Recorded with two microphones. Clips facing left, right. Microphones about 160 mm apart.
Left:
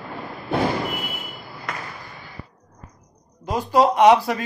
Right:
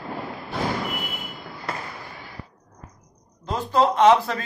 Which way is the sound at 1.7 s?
30° right (ahead or behind).